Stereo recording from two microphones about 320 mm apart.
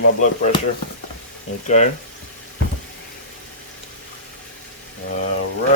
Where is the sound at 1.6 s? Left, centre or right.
Left.